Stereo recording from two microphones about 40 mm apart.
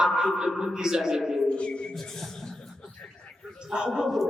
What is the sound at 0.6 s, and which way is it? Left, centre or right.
Speech, centre.